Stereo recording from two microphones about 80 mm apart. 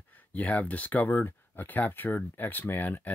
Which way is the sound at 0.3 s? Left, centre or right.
Centre.